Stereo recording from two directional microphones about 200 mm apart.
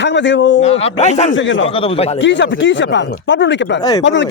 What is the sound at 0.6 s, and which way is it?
Speech, 30° left (ahead or behind).